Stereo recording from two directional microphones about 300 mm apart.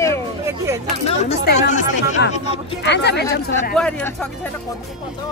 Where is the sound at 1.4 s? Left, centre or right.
Left.